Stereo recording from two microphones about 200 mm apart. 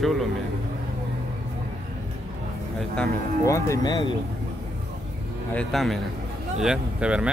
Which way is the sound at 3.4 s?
15° left (ahead or behind).